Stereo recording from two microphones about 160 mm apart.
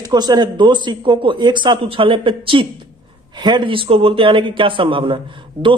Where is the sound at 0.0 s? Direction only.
25° right (ahead or behind).